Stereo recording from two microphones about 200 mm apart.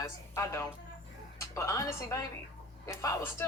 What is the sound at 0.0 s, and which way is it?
A woman's voice, 15° left (ahead or behind).